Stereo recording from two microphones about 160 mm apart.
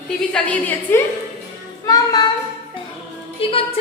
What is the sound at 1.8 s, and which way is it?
Child singing, 25° left (ahead or behind).